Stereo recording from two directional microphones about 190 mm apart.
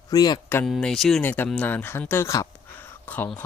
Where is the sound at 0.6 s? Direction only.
Centre (ahead or behind).